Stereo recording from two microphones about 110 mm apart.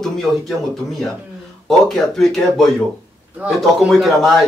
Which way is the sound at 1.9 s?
Centre (ahead or behind).